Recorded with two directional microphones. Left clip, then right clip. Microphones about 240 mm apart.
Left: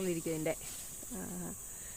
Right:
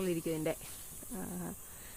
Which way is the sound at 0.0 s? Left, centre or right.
Centre.